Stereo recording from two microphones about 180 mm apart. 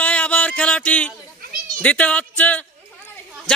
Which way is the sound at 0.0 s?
5° left (ahead or behind).